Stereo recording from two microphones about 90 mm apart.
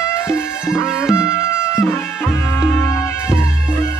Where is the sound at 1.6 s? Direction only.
30° left (ahead or behind).